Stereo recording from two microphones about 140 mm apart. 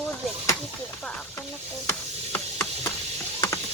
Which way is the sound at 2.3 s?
20° left (ahead or behind).